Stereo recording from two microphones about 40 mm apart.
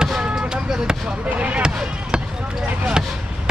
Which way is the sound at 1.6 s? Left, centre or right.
Right.